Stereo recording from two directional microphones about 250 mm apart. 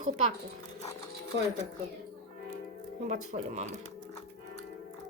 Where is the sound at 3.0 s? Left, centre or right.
Right.